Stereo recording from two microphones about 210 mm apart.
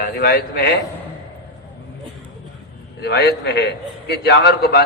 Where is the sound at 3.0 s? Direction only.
50° left (ahead or behind).